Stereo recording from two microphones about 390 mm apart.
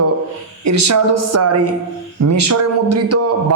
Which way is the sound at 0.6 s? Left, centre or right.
Right.